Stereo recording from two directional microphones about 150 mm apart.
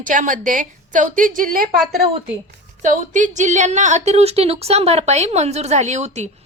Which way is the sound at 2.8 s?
55° right (ahead or behind).